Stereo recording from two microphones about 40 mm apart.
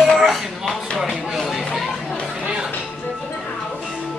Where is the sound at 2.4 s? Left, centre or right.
Right.